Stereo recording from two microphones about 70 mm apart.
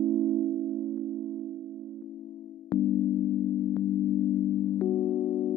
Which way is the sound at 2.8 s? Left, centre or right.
Left.